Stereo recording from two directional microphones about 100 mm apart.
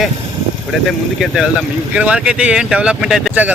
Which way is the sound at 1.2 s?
Centre (ahead or behind).